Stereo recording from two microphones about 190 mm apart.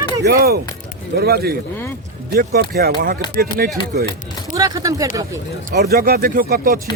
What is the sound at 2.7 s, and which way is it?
Speech, 55° right (ahead or behind).